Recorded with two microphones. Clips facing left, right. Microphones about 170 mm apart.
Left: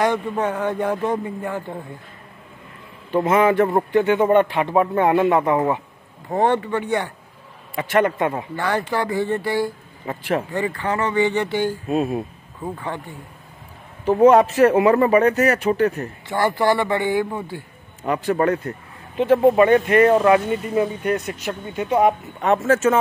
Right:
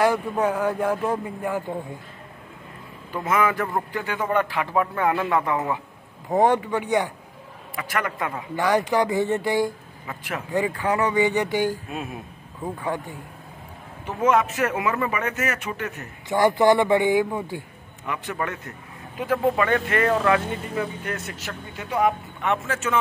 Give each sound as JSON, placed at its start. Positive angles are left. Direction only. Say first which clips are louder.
{"t": 0.0, "sound": "speech", "louder": "even", "side_deg": -10}
{"t": 3.1, "sound": "a man's voice", "louder": "left 6 dB", "side_deg": 30}
{"t": 6.3, "sound": "speech", "louder": "even", "side_deg": -15}
{"t": 7.7, "sound": "a man's voice", "louder": "left 9 dB", "side_deg": 25}
{"t": 8.5, "sound": "speech", "louder": "right 5 dB", "side_deg": -15}
{"t": 10.0, "sound": "speech", "louder": "left 9 dB", "side_deg": 30}
{"t": 10.5, "sound": "speech", "louder": "even", "side_deg": -10}
{"t": 11.9, "sound": "speech", "louder": "left 11 dB", "side_deg": 35}
{"t": 14.0, "sound": "speech", "louder": "left 8 dB", "side_deg": 35}
{"t": 16.3, "sound": "speech", "louder": "right 2 dB", "side_deg": -15}
{"t": 18.0, "sound": "a man's voice", "louder": "left 10 dB", "side_deg": 35}
{"t": 22.4, "sound": "speech", "louder": "left 9 dB", "side_deg": 40}